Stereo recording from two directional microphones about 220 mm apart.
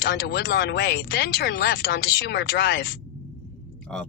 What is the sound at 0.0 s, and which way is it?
Speech, 45° left (ahead or behind).